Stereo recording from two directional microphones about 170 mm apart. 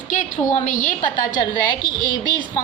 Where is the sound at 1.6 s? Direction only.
25° left (ahead or behind).